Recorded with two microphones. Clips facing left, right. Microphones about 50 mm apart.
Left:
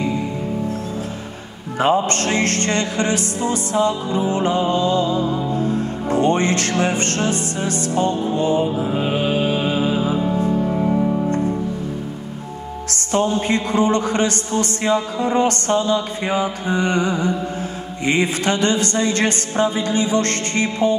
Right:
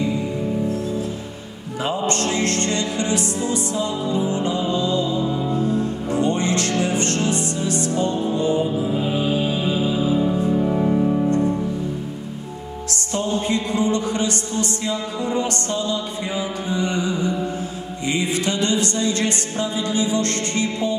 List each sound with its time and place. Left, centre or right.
1.8 s music: left
10.7 s music: centre
12.9 s music: left